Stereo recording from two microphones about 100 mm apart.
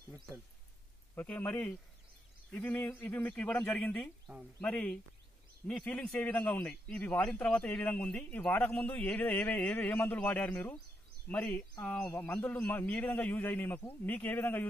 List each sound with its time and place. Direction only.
1.1 s a man's voice: 15° left (ahead or behind)